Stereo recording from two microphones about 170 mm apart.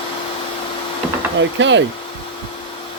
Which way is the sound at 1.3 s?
90° right.